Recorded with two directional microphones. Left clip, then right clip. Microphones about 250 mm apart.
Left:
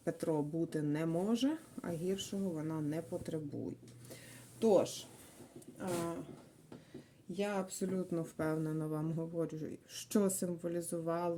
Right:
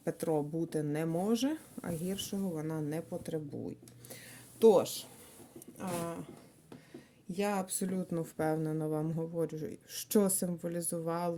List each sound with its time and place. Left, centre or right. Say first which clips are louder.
0.0 s speech: right 3 dB; right
4.6 s speech: right 5 dB; right
7.3 s speech: right 3 dB; right